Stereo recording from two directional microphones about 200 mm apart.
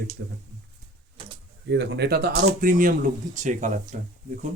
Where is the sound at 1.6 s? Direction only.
60° right (ahead or behind); by 3.9 s 40° right (ahead or behind).